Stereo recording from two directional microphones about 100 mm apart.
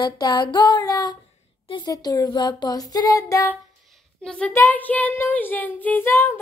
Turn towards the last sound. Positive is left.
turn(degrees=25)  # may be behind; listen again after turning